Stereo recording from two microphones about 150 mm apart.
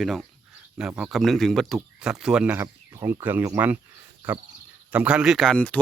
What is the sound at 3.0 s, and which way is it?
Speech, 25° right (ahead or behind).